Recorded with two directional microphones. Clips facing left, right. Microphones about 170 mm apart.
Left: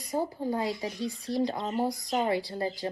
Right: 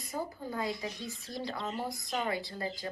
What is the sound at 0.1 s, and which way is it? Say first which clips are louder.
A woman's voice: left 8 dB; 35° left (ahead or behind).